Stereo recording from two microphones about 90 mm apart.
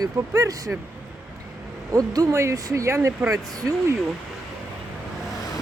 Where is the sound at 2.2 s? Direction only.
35° right (ahead or behind).